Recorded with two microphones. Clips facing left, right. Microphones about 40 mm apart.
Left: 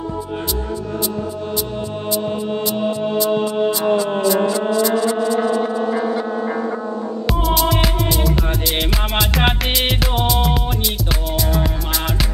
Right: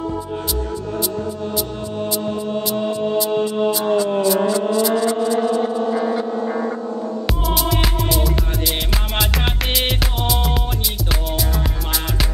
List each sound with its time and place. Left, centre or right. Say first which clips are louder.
5.0 s music: even; left
7.4 s music: left 3 dB; centre